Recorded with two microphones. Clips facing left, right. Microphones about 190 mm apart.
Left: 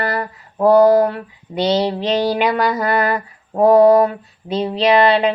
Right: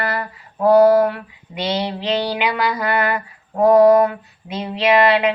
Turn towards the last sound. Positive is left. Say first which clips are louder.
# left 2 dB
turn(degrees=35)  # may be behind; listen again after turning